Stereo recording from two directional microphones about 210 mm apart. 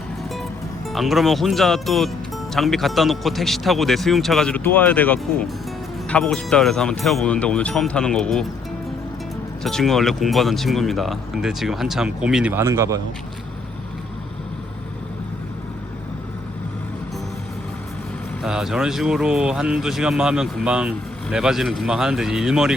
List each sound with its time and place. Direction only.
0.9 s speech: centre (ahead or behind)
9.6 s speech: centre (ahead or behind)
18.4 s speech: centre (ahead or behind)